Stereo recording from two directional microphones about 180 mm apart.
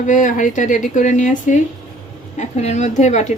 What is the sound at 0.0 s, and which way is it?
Speech, 45° left (ahead or behind).